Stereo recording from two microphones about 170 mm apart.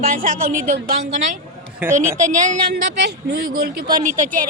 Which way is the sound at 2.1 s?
45° right (ahead or behind).